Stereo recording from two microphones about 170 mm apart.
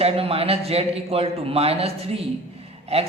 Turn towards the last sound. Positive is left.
turn(degrees=-35)  # may be behind; listen again after turning